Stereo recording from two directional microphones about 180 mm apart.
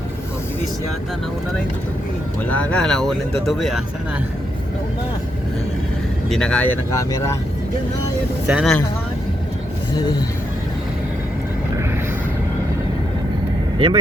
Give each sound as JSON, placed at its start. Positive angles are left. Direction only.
{"t": 2.5, "sound": "speech", "side_deg": 5}
{"t": 6.3, "sound": "speech", "side_deg": 5}
{"t": 8.4, "sound": "speech", "side_deg": -5}
{"t": 10.0, "sound": "speech", "side_deg": 20}
{"t": 13.7, "sound": "speech", "side_deg": -30}